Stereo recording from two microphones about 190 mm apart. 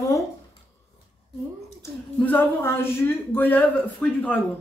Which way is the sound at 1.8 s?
10° left (ahead or behind).